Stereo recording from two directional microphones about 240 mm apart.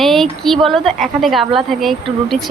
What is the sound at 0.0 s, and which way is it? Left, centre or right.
A woman's voice, centre.